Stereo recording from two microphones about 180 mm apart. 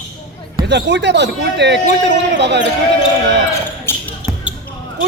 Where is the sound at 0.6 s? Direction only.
75° right (ahead or behind).